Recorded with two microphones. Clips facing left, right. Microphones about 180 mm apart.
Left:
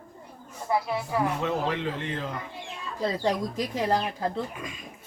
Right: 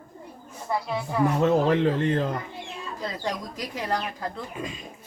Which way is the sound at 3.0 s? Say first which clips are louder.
Left 6 dB; 30° left (ahead or behind).